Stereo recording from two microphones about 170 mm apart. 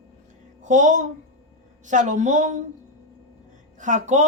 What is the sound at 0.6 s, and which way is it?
Speech, 45° right (ahead or behind).